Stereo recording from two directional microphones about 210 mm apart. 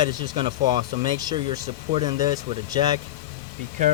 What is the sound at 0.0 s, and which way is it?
Speech, 20° right (ahead or behind).